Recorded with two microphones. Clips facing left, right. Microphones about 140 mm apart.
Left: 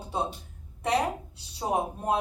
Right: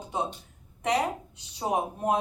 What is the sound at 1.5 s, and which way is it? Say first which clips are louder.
Speech: even; 15° right (ahead or behind).